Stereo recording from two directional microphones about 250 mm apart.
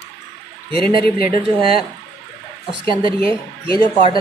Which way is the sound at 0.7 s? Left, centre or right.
Centre.